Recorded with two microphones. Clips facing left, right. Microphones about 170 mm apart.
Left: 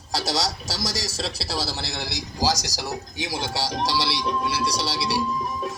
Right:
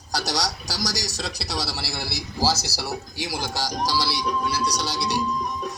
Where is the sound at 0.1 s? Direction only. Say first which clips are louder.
Left 1 dB; 25° left (ahead or behind).